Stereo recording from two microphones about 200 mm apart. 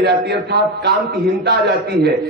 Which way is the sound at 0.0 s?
55° right (ahead or behind).